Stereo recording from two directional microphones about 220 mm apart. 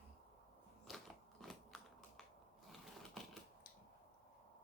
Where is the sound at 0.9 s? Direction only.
Centre (ahead or behind).